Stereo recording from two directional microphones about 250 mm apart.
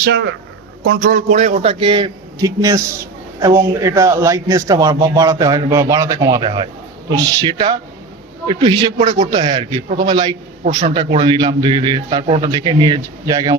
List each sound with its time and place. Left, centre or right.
0.0 s a man's voice: right; by 8.9 s centre
9.0 s a man's voice: right
9.3 s a man's voice: centre